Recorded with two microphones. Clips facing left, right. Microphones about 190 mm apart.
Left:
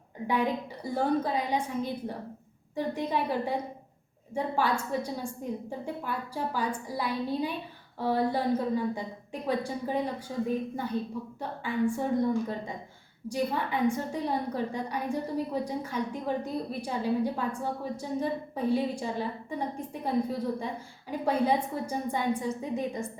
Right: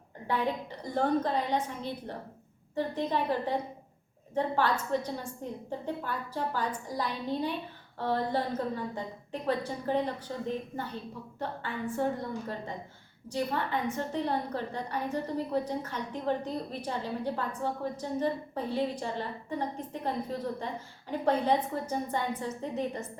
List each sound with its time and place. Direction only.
0.3 s a woman's voice: 10° left (ahead or behind)
13.2 s a woman's voice: 10° left (ahead or behind)